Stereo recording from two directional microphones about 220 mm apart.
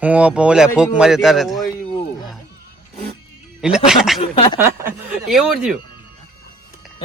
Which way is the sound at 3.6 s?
5° right (ahead or behind).